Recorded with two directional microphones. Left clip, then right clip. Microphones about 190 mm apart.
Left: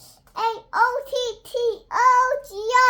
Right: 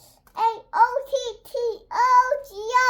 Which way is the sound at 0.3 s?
25° left (ahead or behind).